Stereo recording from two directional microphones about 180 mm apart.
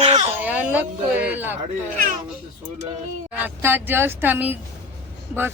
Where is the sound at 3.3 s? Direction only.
10° right (ahead or behind).